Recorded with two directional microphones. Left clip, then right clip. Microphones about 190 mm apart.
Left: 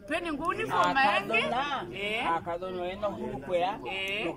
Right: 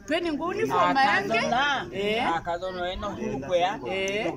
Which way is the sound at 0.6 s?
Centre (ahead or behind).